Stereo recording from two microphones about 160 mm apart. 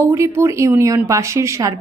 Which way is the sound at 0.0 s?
15° right (ahead or behind).